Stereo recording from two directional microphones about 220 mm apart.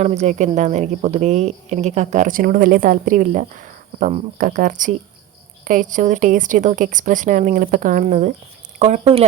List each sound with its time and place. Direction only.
0.0 s a woman's voice: 30° right (ahead or behind)